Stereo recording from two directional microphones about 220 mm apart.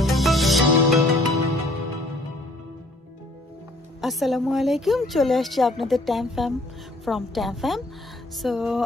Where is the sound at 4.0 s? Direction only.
Centre (ahead or behind).